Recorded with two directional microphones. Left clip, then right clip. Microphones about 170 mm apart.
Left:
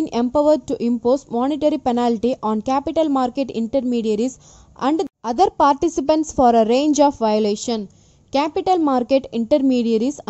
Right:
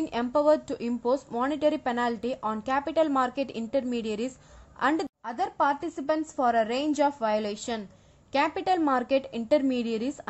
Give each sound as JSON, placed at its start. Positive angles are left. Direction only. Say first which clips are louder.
{"t": 0.4, "sound": "a woman's voice", "louder": "left 6 dB", "side_deg": 30}